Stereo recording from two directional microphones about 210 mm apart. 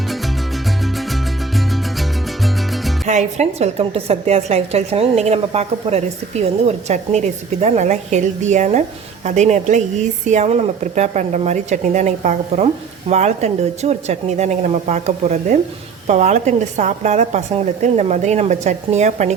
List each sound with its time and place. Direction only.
0.9 s music: centre (ahead or behind)
3.1 s a woman's voice: 35° right (ahead or behind)